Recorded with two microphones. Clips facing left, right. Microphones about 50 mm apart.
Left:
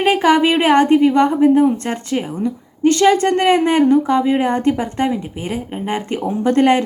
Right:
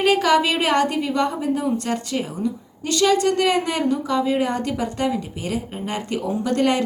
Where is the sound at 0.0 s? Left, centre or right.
Left.